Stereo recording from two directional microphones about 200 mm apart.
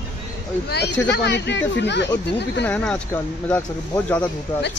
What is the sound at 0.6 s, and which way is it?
Speech, 55° left (ahead or behind).